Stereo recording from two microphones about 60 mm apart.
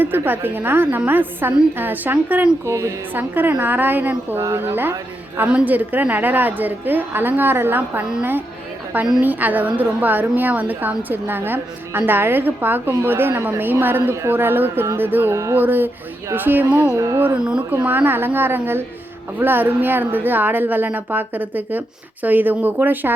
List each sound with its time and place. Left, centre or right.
0.0 s a woman's voice: right
2.6 s a sound: right
3.2 s a woman's voice: right
4.4 s a woman's voice: right
5.5 s a woman's voice: right
14.3 s a woman's voice: right
15.3 s a sound: right
15.5 s a woman's voice: right
16.6 s speech: right
16.9 s a sound: right
17.8 s a woman's voice: right